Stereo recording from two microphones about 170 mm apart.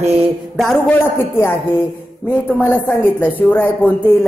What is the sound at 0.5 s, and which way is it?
A woman's voice, centre (ahead or behind).